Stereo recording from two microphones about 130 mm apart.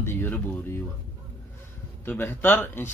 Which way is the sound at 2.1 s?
15° left (ahead or behind).